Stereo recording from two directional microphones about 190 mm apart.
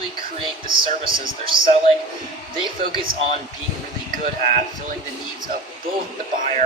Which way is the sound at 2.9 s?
25° right (ahead or behind).